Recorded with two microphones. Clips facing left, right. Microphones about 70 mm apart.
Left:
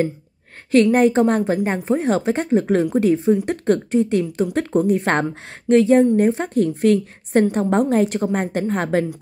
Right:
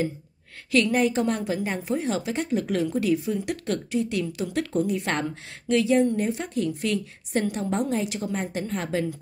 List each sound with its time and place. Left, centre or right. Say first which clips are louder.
0.9 s speech: left 8 dB; left